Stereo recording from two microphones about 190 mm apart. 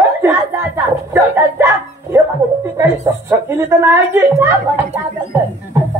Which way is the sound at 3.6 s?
10° right (ahead or behind).